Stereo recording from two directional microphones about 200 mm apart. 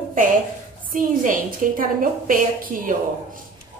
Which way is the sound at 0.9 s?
40° right (ahead or behind).